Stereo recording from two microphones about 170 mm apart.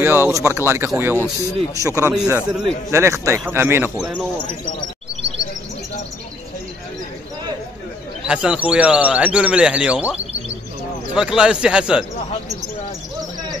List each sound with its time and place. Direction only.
0.0 s speech: 15° right (ahead or behind)
2.1 s speech: 5° right (ahead or behind)
2.9 s speech: 15° right (ahead or behind)
4.0 s speech: centre (ahead or behind)
8.3 s speech: 5° right (ahead or behind)